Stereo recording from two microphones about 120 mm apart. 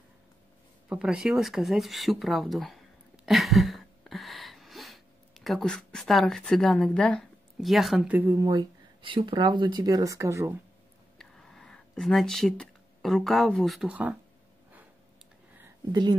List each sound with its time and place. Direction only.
0.8 s speech: 5° right (ahead or behind)
3.3 s a sound: centre (ahead or behind)
8.4 s speech: 30° right (ahead or behind)
9.0 s speech: 45° right (ahead or behind); by 10.5 s 25° right (ahead or behind)
11.1 s a sound: 5° left (ahead or behind)
13.8 s speech: 10° right (ahead or behind)
15.9 s speech: 35° right (ahead or behind)